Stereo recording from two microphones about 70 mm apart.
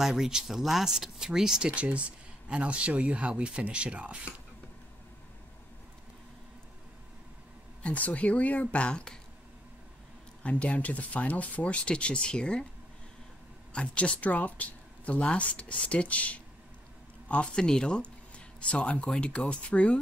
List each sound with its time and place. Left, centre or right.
0.0 s speech: centre
7.8 s speech: centre
10.4 s speech: centre
13.7 s speech: centre